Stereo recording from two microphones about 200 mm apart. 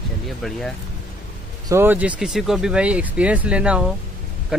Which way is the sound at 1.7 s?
10° right (ahead or behind).